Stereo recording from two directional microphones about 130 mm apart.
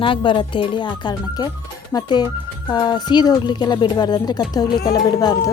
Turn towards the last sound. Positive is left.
turn(degrees=30)  # may be behind; listen again after turning